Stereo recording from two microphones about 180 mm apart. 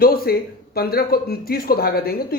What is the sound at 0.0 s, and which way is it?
Speech, 55° left (ahead or behind).